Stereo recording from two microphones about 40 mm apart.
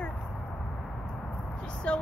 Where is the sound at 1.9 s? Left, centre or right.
Left.